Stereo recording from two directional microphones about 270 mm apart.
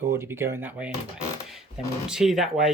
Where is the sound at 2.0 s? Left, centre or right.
Centre.